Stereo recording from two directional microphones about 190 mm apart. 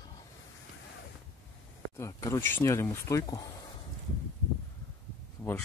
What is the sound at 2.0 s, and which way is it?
Speech, 15° left (ahead or behind).